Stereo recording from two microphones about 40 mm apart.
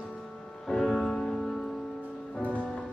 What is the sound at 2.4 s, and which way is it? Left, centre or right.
Music, left.